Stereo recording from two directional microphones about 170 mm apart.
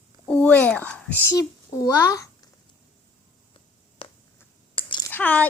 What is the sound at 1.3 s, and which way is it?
Speech, 20° left (ahead or behind).